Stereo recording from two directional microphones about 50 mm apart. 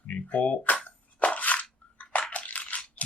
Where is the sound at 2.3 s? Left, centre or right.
Left.